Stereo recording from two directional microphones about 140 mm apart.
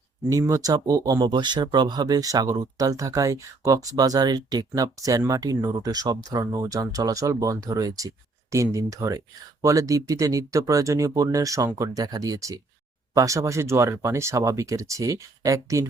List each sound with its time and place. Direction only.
0.3 s speech: 20° right (ahead or behind)